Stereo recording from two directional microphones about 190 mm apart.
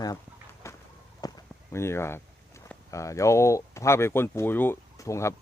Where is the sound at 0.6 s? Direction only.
15° left (ahead or behind).